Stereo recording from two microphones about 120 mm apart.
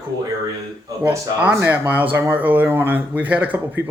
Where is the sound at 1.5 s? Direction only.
15° right (ahead or behind).